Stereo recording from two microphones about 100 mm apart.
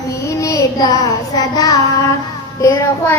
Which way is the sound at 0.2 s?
30° left (ahead or behind).